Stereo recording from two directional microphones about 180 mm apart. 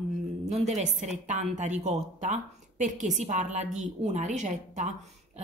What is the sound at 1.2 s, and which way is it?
A woman's voice, 40° right (ahead or behind).